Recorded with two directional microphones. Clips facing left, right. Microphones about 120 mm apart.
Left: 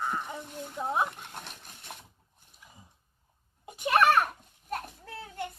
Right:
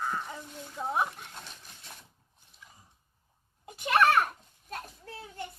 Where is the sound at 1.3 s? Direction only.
60° left (ahead or behind).